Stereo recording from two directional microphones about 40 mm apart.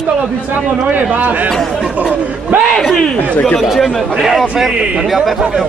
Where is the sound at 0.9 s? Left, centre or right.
Right.